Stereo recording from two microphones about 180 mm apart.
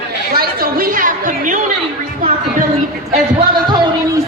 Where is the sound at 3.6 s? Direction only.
25° right (ahead or behind).